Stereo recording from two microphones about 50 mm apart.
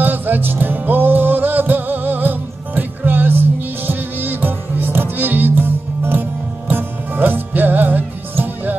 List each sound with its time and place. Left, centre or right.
0.0 s music: right